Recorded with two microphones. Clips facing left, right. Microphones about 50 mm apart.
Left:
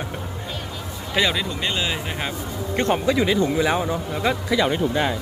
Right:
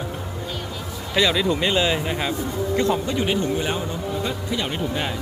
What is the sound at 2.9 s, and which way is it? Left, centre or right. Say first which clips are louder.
A man's voice: left 3 dB; left.